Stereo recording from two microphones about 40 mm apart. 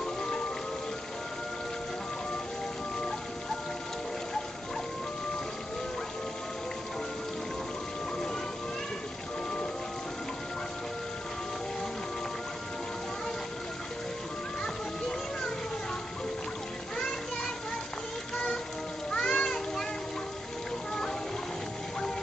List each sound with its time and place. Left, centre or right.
0.0 s music: centre
14.6 s music: centre
18.3 s music: centre
19.0 s children playing: centre